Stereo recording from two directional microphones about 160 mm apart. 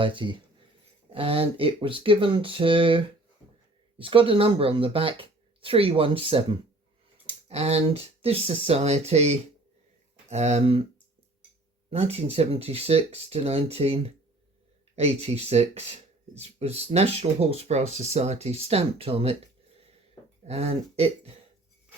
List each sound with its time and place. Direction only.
0.0 s speech: 30° right (ahead or behind)
11.9 s speech: 40° right (ahead or behind)
20.4 s speech: 40° right (ahead or behind)